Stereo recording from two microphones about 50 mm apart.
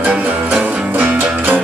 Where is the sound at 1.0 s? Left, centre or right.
Right.